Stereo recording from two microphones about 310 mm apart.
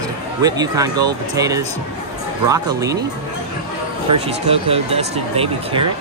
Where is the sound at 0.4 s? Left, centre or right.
Centre.